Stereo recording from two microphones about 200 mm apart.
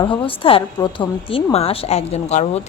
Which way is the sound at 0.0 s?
25° left (ahead or behind).